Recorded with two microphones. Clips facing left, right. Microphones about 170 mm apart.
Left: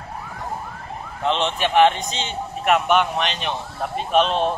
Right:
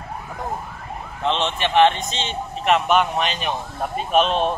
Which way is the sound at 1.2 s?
15° left (ahead or behind).